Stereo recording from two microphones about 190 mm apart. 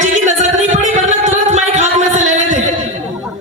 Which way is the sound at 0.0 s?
40° right (ahead or behind).